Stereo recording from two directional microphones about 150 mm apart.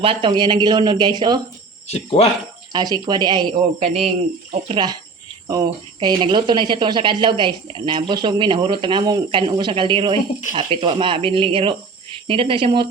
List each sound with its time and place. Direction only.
0.0 s speech: 35° right (ahead or behind)
1.9 s speech: 40° left (ahead or behind)
2.7 s speech: 30° right (ahead or behind)
3.8 s speech: 45° right (ahead or behind)
4.7 s speech: 30° right (ahead or behind)